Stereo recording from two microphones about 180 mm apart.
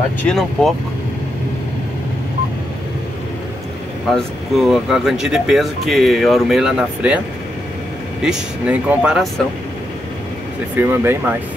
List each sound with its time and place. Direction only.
0.2 s speech: 5° left (ahead or behind)
4.1 s speech: centre (ahead or behind)
8.2 s speech: 5° right (ahead or behind)
10.8 s speech: 10° right (ahead or behind)